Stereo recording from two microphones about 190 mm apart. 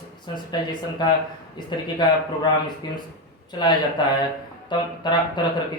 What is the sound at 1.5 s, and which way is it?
Speech, 25° left (ahead or behind).